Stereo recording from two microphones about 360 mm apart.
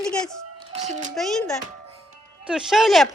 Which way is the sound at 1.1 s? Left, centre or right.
Centre.